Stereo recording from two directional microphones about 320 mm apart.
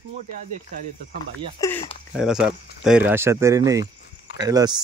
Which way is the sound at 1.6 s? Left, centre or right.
Centre.